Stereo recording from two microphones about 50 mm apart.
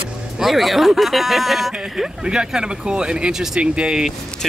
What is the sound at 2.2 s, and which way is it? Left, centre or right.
Speech, centre.